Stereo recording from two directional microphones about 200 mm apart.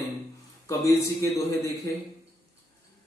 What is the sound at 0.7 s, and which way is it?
A man's voice, 15° left (ahead or behind).